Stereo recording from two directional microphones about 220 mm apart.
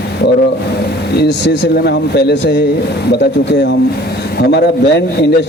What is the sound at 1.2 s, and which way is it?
Speech, 50° left (ahead or behind).